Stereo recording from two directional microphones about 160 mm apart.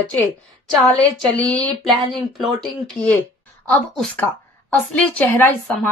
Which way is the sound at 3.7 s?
5° left (ahead or behind).